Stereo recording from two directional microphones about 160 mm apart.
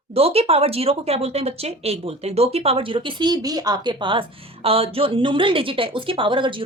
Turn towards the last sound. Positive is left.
turn(degrees=-30)  # may be behind; listen again after turning